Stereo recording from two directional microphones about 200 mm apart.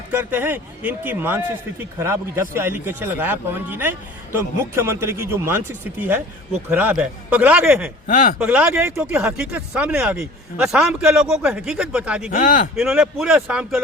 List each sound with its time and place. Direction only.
0.1 s a man's voice: 10° right (ahead or behind)
8.0 s speech: 40° left (ahead or behind)
8.4 s speech: 10° right (ahead or behind)
12.3 s speech: 40° left (ahead or behind)
12.7 s speech: 5° right (ahead or behind)